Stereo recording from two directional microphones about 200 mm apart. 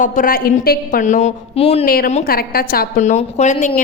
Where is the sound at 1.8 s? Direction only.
45° left (ahead or behind).